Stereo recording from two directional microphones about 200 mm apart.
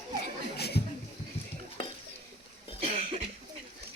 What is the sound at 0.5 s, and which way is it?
Chuckle, 55° left (ahead or behind).